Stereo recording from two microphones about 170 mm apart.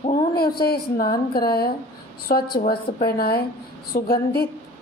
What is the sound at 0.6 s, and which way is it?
A woman's voice, 65° left (ahead or behind).